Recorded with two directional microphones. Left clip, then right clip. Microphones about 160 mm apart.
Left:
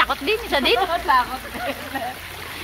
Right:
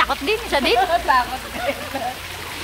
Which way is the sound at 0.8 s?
35° left (ahead or behind).